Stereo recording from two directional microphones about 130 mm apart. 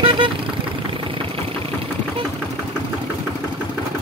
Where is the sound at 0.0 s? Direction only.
40° right (ahead or behind).